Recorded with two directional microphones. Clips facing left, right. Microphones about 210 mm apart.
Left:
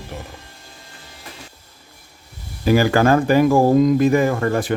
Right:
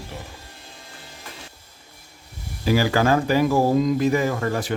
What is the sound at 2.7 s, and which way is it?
Speech, 55° left (ahead or behind).